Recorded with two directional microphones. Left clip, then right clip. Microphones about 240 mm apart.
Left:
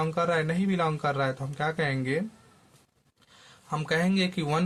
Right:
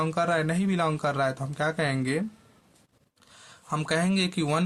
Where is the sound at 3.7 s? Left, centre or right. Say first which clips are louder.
Right 1 dB; right.